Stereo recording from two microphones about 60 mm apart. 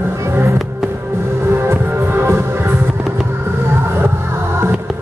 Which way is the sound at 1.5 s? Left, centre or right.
Right.